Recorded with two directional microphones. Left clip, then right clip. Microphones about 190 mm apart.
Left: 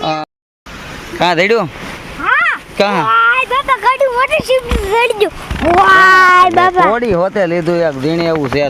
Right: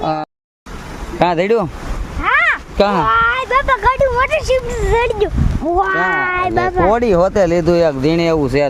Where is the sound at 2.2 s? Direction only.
15° right (ahead or behind).